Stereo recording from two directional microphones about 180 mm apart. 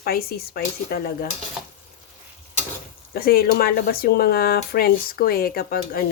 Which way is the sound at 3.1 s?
55° left (ahead or behind).